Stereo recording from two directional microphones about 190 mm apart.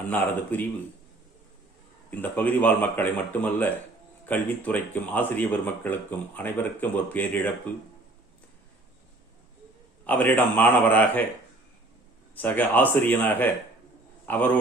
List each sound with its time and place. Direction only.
0.5 s speech: 10° left (ahead or behind)
2.0 s speech: 10° left (ahead or behind)
10.1 s speech: 10° left (ahead or behind)
12.3 s speech: 10° left (ahead or behind)